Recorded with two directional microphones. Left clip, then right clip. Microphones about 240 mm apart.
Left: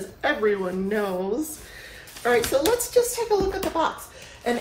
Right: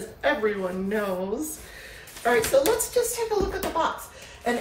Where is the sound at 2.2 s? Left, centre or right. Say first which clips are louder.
Even; centre.